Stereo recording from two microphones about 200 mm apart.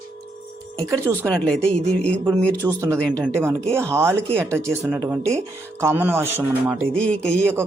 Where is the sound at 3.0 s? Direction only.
5° left (ahead or behind).